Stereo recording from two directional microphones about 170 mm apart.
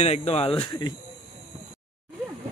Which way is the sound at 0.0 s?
35° left (ahead or behind).